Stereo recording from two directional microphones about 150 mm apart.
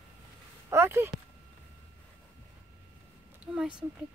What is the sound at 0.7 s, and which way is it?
Speech, 15° right (ahead or behind).